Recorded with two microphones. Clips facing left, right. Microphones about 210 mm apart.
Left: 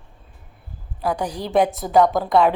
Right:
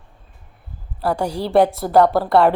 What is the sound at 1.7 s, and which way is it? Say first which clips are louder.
Speech: right 2 dB; 10° right (ahead or behind).